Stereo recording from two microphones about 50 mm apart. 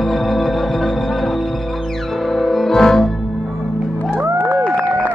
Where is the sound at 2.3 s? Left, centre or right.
Centre.